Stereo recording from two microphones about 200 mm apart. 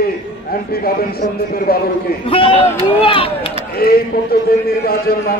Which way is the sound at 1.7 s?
50° left (ahead or behind).